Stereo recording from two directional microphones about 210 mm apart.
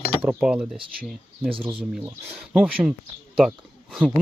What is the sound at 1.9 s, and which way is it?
Speech, 5° right (ahead or behind).